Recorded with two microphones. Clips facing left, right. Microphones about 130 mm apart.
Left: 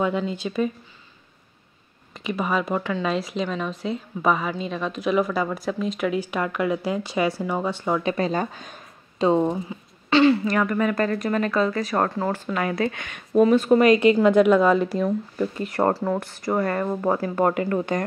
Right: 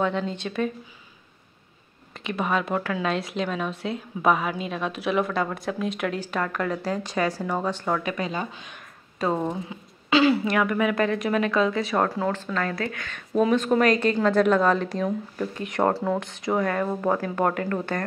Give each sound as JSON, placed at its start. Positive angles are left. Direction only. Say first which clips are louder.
{"t": 0.0, "sound": "a woman's voice", "louder": "left 2 dB", "side_deg": 5}
{"t": 2.1, "sound": "a woman's voice", "louder": "left 1 dB", "side_deg": 0}
{"t": 6.1, "sound": "a woman's voice", "louder": "left 3 dB", "side_deg": 10}
{"t": 8.0, "sound": "speech", "louder": "left 5 dB", "side_deg": 35}
{"t": 9.2, "sound": "speech", "louder": "left 6 dB", "side_deg": 20}
{"t": 9.7, "sound": "a woman's voice", "louder": "left 1 dB", "side_deg": 0}
{"t": 12.4, "sound": "a woman's voice", "louder": "left 3 dB", "side_deg": 10}
{"t": 13.3, "sound": "a woman's voice", "louder": "left 4 dB", "side_deg": 5}